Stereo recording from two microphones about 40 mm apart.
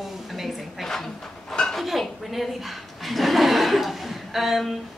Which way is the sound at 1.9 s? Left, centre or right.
Centre.